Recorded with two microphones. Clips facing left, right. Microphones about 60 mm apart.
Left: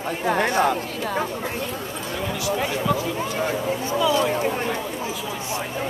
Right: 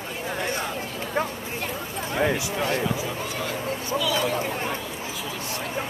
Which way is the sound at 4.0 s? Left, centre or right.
Left.